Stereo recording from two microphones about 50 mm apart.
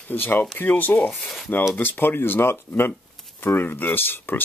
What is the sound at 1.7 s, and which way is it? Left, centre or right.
Speech, left.